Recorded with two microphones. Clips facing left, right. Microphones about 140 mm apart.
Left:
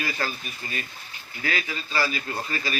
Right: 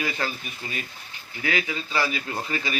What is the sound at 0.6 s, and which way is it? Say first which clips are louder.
Speech: even; 15° right (ahead or behind).